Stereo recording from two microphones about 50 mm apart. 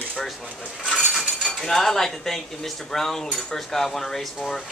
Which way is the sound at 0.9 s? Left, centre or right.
Centre.